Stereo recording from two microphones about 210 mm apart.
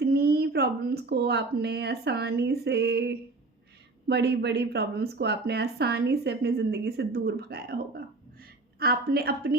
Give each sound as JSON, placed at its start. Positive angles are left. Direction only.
{"t": 0.0, "sound": "speech", "side_deg": -50}